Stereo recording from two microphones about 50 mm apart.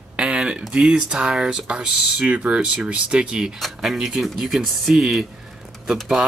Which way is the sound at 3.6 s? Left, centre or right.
Centre.